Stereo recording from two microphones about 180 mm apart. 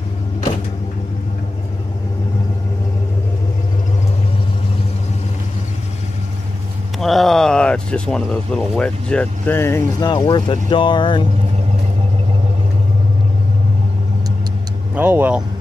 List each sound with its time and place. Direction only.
7.0 s speech: centre (ahead or behind); by 11.2 s 25° left (ahead or behind)
15.0 s speech: 10° right (ahead or behind)